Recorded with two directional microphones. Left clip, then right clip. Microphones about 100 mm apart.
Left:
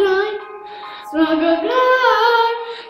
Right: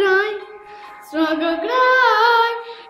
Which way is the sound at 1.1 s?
20° right (ahead or behind).